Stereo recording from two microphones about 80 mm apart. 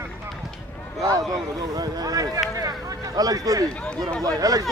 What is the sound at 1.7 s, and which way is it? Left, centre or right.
Speech, right.